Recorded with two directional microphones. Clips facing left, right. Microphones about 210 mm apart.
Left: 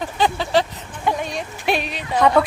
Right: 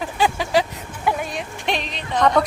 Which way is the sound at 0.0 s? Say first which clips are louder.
Even; 10° right (ahead or behind).